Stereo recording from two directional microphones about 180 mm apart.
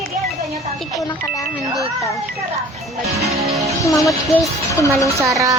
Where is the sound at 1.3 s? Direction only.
20° left (ahead or behind).